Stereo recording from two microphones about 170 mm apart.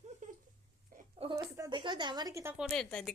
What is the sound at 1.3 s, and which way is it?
A woman's voice, 20° right (ahead or behind).